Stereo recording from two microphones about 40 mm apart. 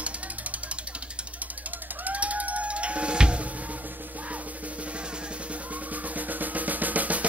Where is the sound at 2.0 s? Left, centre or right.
Right.